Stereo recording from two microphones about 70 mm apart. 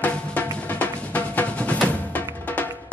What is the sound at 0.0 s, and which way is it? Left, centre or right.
Music, left.